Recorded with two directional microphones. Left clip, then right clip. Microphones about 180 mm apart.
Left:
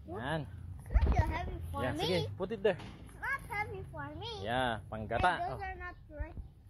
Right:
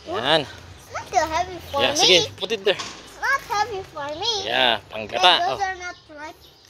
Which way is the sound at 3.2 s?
5° right (ahead or behind).